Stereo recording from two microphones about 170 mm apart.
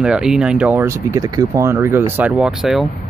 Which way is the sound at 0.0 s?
5° right (ahead or behind).